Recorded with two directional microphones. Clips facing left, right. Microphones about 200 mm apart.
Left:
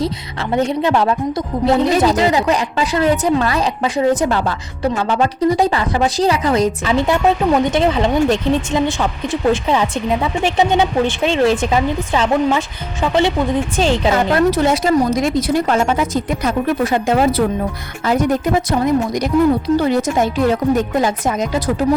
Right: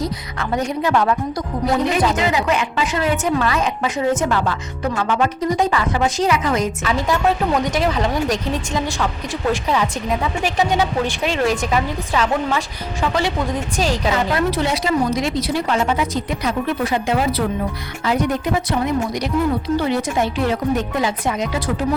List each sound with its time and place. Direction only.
0.0 s a woman's voice: 30° left (ahead or behind)
13.7 s speech: 25° left (ahead or behind)
14.1 s speech: 45° left (ahead or behind)